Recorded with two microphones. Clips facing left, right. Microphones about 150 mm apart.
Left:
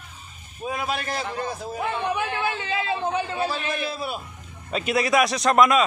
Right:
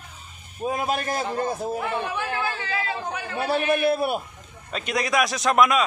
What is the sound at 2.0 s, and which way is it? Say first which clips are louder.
Speech: left 2 dB; 20° left (ahead or behind).